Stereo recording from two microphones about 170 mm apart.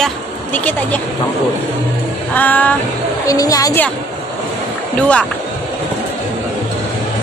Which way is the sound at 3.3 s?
20° left (ahead or behind).